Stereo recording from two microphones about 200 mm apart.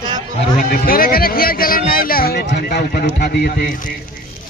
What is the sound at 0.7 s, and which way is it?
Speech, 50° left (ahead or behind).